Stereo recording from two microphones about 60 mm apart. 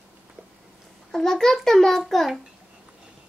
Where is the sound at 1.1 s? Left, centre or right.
Centre.